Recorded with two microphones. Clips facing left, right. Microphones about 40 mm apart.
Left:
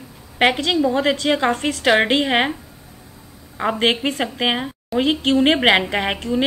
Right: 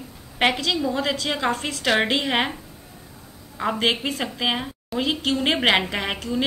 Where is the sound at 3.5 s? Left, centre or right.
Left.